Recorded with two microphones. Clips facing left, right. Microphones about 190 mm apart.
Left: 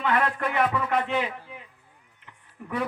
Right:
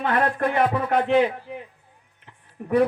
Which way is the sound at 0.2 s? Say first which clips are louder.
Right 4 dB; 45° right (ahead or behind).